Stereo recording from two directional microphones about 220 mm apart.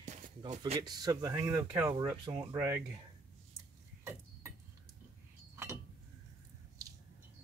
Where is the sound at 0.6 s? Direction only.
20° right (ahead or behind).